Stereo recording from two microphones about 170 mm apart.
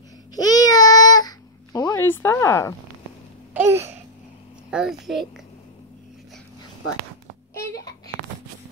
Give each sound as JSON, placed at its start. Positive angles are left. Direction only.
{"t": 0.4, "sound": "baby cry", "side_deg": 20}
{"t": 2.0, "sound": "speech", "side_deg": 15}
{"t": 3.5, "sound": "babbling", "side_deg": -15}
{"t": 4.6, "sound": "a child's voice", "side_deg": -5}
{"t": 7.6, "sound": "a sound", "side_deg": 20}